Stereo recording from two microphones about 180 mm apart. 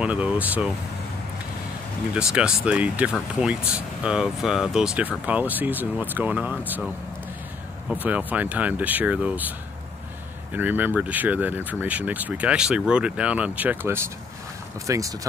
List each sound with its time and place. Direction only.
0.0 s speech: 5° right (ahead or behind)
2.1 s speech: 5° right (ahead or behind)
7.9 s speech: 10° right (ahead or behind)
10.5 s speech: 10° right (ahead or behind)